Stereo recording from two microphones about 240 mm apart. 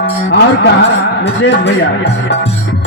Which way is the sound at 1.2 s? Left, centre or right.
Left.